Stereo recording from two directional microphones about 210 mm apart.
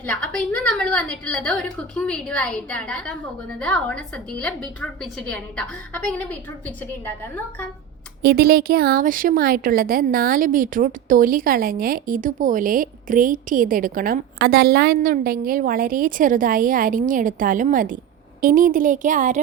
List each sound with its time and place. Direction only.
0.0 s a woman's voice: 5° left (ahead or behind)
8.2 s a woman's voice: 45° right (ahead or behind)